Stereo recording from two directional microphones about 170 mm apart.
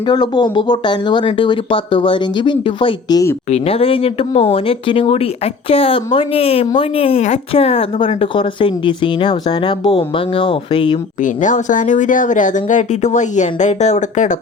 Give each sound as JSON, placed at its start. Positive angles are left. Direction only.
{"t": 0.1, "sound": "speech", "side_deg": 25}
{"t": 3.5, "sound": "speech", "side_deg": 35}
{"t": 11.2, "sound": "speech", "side_deg": 50}